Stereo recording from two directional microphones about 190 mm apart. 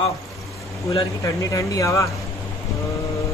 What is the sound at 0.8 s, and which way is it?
Speech, 15° left (ahead or behind).